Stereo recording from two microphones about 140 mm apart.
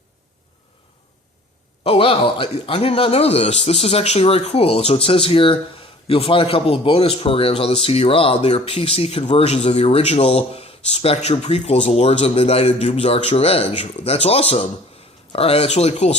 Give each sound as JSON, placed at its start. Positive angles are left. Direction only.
{"t": 1.8, "sound": "a man's voice", "side_deg": 40}